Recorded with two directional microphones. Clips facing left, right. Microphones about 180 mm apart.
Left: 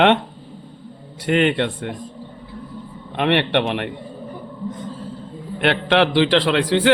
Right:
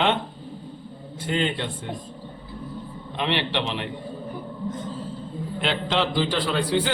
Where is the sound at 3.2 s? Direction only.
60° left (ahead or behind).